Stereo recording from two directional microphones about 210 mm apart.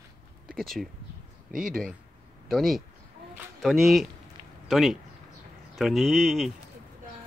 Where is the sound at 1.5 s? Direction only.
40° right (ahead or behind).